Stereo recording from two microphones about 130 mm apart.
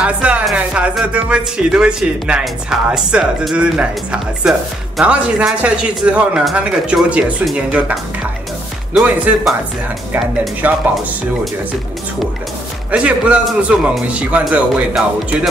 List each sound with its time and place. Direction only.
0.0 s speech: 10° right (ahead or behind)
10.6 s speech: 15° right (ahead or behind)
12.9 s speech: 10° right (ahead or behind)